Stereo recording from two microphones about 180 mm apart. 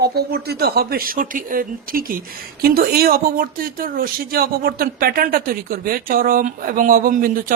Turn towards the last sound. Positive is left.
turn(degrees=-50)  # may be behind; listen again after turning